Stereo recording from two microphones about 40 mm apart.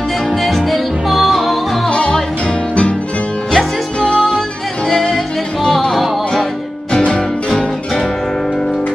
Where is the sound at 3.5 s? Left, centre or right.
Centre.